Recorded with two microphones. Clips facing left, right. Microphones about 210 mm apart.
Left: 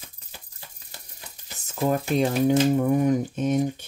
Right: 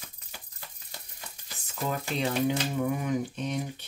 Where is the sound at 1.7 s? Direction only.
45° left (ahead or behind).